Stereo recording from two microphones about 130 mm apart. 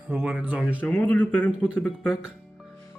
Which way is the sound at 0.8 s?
10° left (ahead or behind).